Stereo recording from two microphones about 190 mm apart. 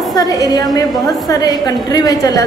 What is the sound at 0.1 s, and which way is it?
A woman's voice, 20° left (ahead or behind).